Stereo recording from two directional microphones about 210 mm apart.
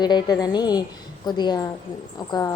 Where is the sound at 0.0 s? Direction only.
20° left (ahead or behind).